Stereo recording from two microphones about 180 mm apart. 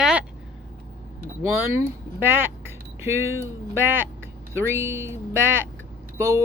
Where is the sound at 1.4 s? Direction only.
15° right (ahead or behind).